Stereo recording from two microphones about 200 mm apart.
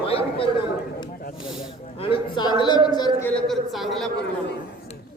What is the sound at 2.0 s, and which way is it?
Speech, 25° left (ahead or behind).